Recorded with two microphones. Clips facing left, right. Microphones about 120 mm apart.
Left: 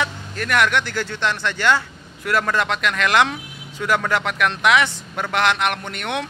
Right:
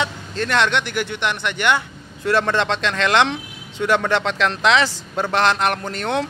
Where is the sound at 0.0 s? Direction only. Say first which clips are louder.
Right 2 dB; 30° right (ahead or behind).